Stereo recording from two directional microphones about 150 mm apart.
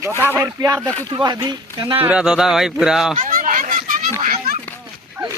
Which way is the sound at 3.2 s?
65° right (ahead or behind).